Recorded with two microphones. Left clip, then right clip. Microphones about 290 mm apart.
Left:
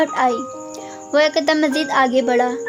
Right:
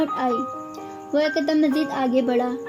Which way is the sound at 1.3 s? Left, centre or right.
Left.